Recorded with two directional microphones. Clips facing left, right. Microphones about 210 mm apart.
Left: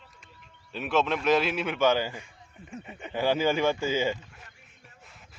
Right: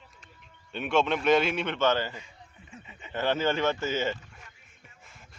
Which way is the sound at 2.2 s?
50° left (ahead or behind).